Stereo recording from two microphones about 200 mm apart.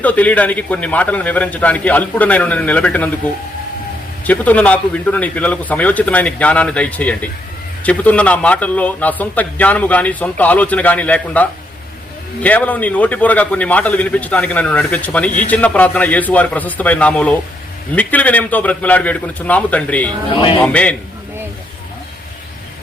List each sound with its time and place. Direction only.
0.0 s a man's voice: 5° left (ahead or behind)
4.3 s a man's voice: 5° left (ahead or behind)
20.3 s a man's voice: 25° left (ahead or behind)
20.6 s a man's voice: 5° left (ahead or behind)